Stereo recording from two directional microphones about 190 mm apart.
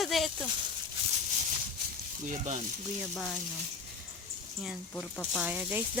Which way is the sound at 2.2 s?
40° right (ahead or behind).